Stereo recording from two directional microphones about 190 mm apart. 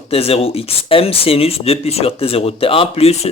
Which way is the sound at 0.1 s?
30° left (ahead or behind).